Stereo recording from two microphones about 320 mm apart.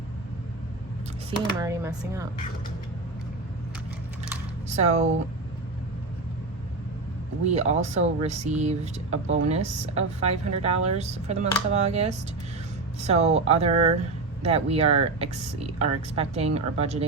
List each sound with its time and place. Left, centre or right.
1.5 s speech: centre
4.7 s speech: right
7.5 s speech: right